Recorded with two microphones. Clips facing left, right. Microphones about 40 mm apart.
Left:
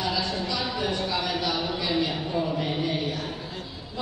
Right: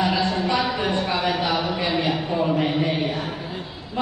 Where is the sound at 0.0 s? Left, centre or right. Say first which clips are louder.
Right 6 dB; right.